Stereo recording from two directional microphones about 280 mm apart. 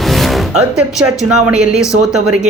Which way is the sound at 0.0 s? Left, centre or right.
Centre.